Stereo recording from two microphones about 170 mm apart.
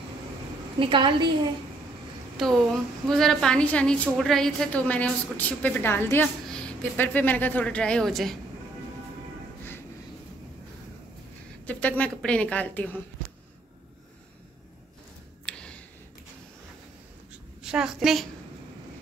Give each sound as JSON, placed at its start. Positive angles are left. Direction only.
{"t": 0.7, "sound": "a woman's voice", "side_deg": -30}
{"t": 2.4, "sound": "a woman's voice", "side_deg": 0}
{"t": 11.6, "sound": "a sound", "side_deg": 10}
{"t": 12.0, "sound": "a woman's voice", "side_deg": 5}
{"t": 15.4, "sound": "a sound", "side_deg": 5}
{"t": 17.6, "sound": "a woman's voice", "side_deg": -5}